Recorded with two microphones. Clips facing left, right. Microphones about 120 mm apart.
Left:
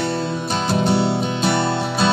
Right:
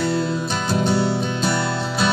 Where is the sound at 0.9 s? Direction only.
70° left (ahead or behind).